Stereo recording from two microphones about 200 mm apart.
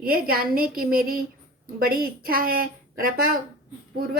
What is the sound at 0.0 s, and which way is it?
A woman's voice, 50° right (ahead or behind).